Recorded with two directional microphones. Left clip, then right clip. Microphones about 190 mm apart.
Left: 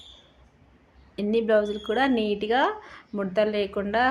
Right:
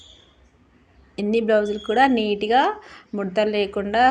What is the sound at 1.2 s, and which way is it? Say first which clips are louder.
Speech: right 3 dB; 10° right (ahead or behind).